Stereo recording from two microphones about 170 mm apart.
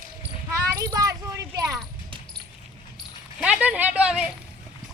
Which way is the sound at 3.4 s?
5° right (ahead or behind).